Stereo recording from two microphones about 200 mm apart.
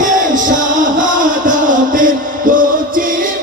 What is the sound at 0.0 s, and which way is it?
Music, 40° right (ahead or behind).